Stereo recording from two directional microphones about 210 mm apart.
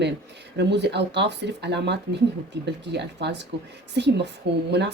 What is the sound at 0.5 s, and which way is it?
Speech, 55° right (ahead or behind).